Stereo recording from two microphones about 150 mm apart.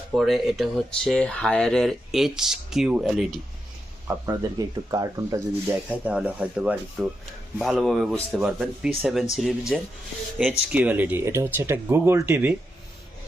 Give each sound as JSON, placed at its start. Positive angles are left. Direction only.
{"t": 0.1, "sound": "speech", "side_deg": 0}
{"t": 4.3, "sound": "speech", "side_deg": -25}
{"t": 5.9, "sound": "speech", "side_deg": -10}
{"t": 10.7, "sound": "speech", "side_deg": -10}